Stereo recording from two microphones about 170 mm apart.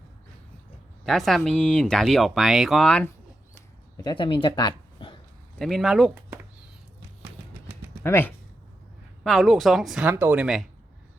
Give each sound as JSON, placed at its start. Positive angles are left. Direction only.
{"t": 1.0, "sound": "speech", "side_deg": 0}
{"t": 4.0, "sound": "speech", "side_deg": 30}
{"t": 5.5, "sound": "speech", "side_deg": 0}
{"t": 8.0, "sound": "speech", "side_deg": 15}
{"t": 9.2, "sound": "speech", "side_deg": 0}